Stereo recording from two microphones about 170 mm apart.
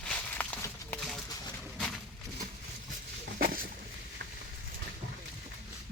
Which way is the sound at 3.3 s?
55° right (ahead or behind).